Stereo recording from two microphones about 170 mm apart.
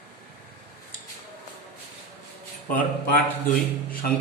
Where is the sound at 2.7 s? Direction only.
55° left (ahead or behind).